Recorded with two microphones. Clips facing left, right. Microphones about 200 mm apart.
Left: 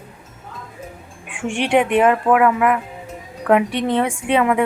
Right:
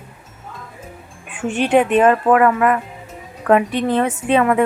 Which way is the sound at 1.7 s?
15° left (ahead or behind).